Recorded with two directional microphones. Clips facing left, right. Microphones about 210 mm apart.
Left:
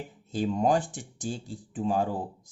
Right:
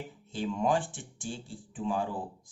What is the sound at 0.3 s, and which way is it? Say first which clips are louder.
Speech: left 4 dB; 40° left (ahead or behind).